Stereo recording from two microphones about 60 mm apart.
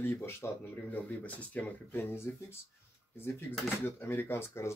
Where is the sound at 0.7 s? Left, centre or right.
Left.